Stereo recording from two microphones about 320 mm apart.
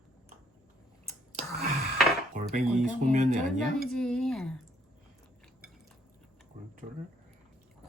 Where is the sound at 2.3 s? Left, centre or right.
Right.